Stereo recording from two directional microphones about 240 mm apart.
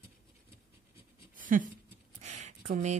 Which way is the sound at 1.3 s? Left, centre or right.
Right.